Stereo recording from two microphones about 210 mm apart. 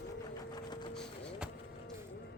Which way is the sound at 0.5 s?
20° left (ahead or behind).